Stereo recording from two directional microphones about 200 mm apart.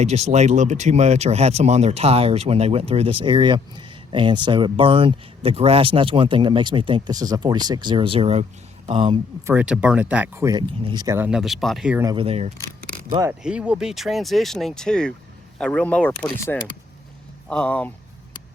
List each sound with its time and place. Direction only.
0.0 s speech: 35° right (ahead or behind)
9.5 s speech: 5° right (ahead or behind)
12.0 s speech: 25° right (ahead or behind)
13.1 s speech: 20° right (ahead or behind)
13.4 s speech: 5° right (ahead or behind)